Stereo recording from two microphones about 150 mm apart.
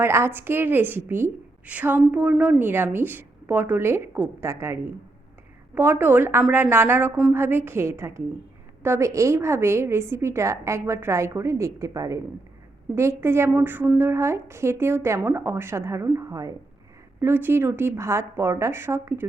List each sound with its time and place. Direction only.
0.0 s a woman's voice: 15° right (ahead or behind)